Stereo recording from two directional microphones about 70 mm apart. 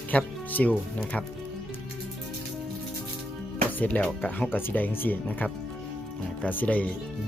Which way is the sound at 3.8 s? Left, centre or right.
Left.